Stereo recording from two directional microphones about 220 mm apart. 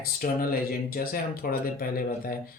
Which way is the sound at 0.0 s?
40° left (ahead or behind).